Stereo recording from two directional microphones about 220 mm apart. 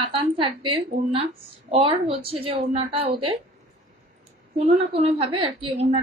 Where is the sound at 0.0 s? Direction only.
25° right (ahead or behind).